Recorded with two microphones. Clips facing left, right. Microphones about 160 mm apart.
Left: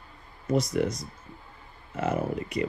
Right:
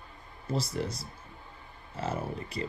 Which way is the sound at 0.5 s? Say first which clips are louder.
Left 7 dB; 30° right (ahead or behind).